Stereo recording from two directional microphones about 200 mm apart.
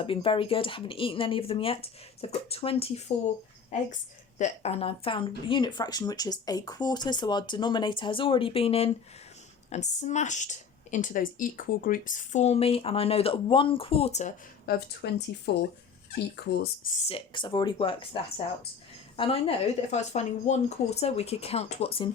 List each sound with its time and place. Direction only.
0.0 s speech: 25° left (ahead or behind)
4.4 s speech: 35° left (ahead or behind)
14.7 s speech: 50° left (ahead or behind)
16.9 s speech: 30° left (ahead or behind)